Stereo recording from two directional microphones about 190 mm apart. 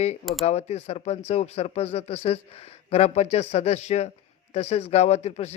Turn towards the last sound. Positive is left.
turn(degrees=35)  # may be behind; listen again after turning